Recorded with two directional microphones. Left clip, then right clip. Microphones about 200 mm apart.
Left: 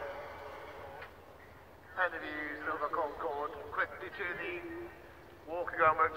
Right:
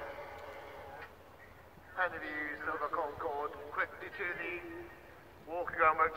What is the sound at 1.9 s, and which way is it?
A man's voice, 20° right (ahead or behind).